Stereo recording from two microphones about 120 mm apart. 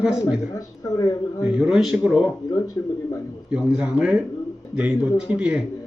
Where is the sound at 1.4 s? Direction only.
5° right (ahead or behind).